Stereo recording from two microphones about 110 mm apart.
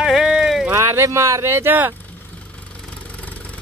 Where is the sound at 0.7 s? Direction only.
25° right (ahead or behind).